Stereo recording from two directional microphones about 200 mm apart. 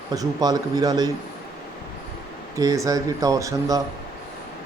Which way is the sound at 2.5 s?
15° right (ahead or behind).